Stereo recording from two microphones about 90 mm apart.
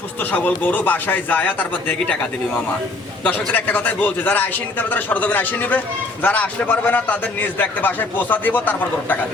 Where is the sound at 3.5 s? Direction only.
20° left (ahead or behind).